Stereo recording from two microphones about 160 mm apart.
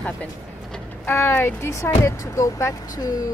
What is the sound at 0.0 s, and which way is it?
Speech, 5° left (ahead or behind).